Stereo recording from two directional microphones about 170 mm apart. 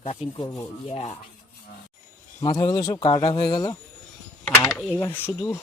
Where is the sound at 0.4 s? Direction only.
20° left (ahead or behind).